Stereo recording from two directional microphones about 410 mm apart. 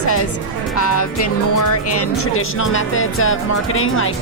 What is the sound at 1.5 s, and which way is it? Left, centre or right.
Speech, left.